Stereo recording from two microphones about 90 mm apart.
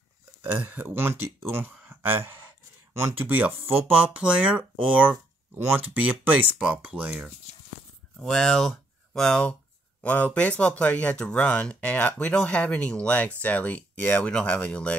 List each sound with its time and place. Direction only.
0.4 s speech: 20° right (ahead or behind)
1.8 s a sound: 20° right (ahead or behind)
2.9 s speech: 25° right (ahead or behind)
8.2 s speech: 5° left (ahead or behind)